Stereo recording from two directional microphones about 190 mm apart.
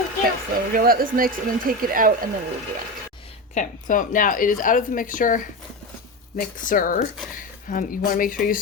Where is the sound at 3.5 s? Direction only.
45° left (ahead or behind).